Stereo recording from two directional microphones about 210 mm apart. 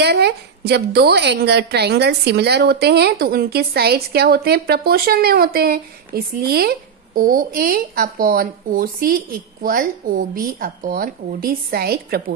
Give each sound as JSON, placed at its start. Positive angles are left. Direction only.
{"t": 0.0, "sound": "a woman's voice", "side_deg": -50}